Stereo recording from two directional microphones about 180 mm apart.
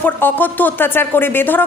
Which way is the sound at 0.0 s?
10° left (ahead or behind).